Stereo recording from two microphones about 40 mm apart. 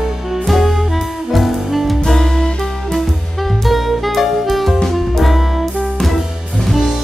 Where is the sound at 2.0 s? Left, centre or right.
Centre.